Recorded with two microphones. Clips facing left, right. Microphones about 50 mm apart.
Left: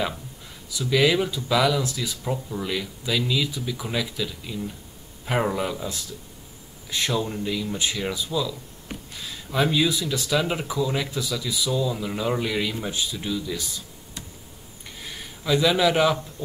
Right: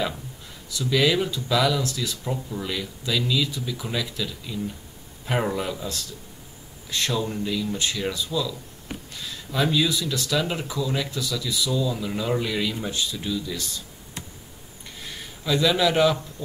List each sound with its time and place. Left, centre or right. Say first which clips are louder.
0.7 s speech: left 1 dB; centre
6.9 s speech: left 1 dB; centre
9.1 s a sound: left 3 dB; centre
9.8 s speech: left 1 dB; left
15.0 s a sound: even; centre
16.4 s speech: left 2 dB; left